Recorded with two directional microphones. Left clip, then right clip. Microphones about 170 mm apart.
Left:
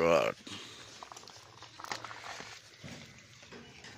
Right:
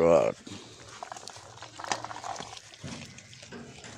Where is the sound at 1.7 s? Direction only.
30° right (ahead or behind).